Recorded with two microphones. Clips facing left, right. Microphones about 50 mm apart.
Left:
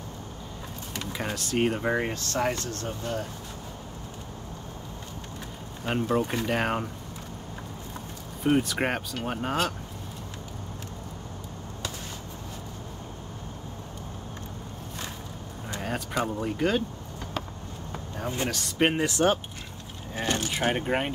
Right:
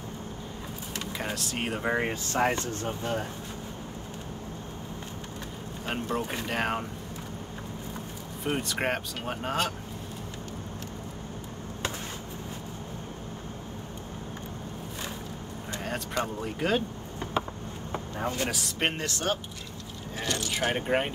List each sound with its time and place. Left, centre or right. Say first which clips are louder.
0.9 s speech: left 1 dB; centre; by 3.3 s right
5.9 s speech: left 5 dB; centre
8.5 s speech: left 4 dB; centre
15.7 s speech: left 2 dB; centre
17.2 s a sound: right 5 dB; right
17.9 s vehicle: right 3 dB; centre
18.5 s speech: left 5 dB; centre
19.0 s speech: left 6 dB; left
20.7 s speech: even; centre